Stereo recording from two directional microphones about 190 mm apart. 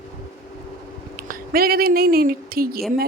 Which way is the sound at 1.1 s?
50° right (ahead or behind).